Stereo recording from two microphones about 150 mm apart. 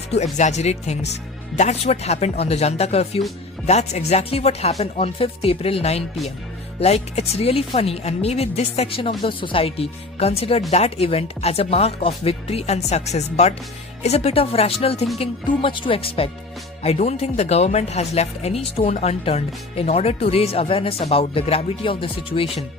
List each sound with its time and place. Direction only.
0.1 s speech: 50° left (ahead or behind)